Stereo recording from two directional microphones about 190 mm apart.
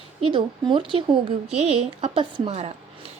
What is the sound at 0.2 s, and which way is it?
A woman's voice, 25° right (ahead or behind).